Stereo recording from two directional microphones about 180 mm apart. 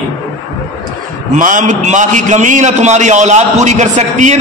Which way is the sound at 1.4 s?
45° right (ahead or behind).